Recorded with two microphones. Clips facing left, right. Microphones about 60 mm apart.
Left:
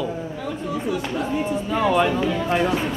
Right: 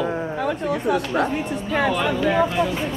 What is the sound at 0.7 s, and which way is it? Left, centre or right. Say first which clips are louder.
Speech: right 2 dB; right.